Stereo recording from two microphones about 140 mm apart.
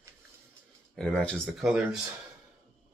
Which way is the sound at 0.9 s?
5° left (ahead or behind).